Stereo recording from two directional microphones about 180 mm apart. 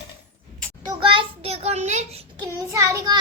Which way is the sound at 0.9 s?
30° right (ahead or behind).